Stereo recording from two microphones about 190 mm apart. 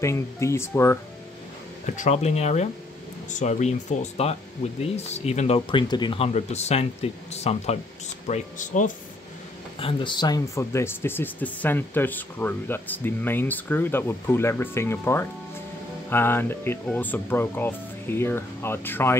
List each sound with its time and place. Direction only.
0.0 s speech: 15° left (ahead or behind)
2.0 s speech: 35° left (ahead or behind)
9.8 s speech: 25° left (ahead or behind); by 19.1 s 10° left (ahead or behind)